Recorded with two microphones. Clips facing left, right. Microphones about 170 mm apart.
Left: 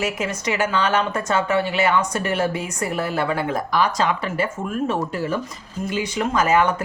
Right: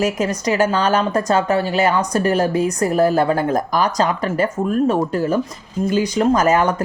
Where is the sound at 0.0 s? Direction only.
40° right (ahead or behind).